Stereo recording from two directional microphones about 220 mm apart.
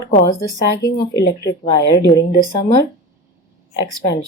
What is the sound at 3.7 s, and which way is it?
Speech, 20° left (ahead or behind).